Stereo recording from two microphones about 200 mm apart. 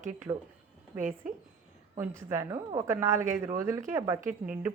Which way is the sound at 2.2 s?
15° right (ahead or behind).